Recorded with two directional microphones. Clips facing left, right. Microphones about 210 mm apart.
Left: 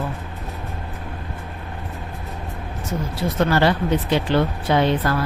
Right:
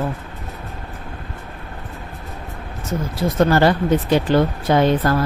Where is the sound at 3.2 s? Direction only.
45° right (ahead or behind).